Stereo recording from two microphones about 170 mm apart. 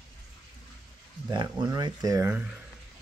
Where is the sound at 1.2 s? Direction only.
25° right (ahead or behind).